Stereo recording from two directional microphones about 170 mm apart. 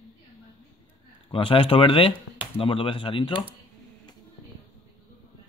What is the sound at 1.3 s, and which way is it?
Speech, 30° left (ahead or behind).